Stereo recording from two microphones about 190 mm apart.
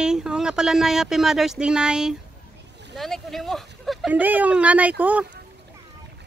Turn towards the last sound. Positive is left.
turn(degrees=-10)  # may be behind; listen again after turning